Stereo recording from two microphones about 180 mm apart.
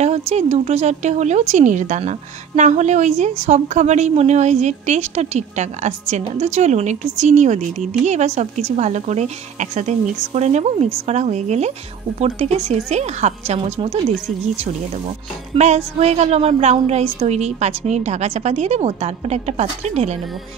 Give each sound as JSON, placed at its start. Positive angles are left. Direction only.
{"t": 0.3, "sound": "a woman's voice", "side_deg": -35}
{"t": 15.5, "sound": "a woman's voice", "side_deg": -40}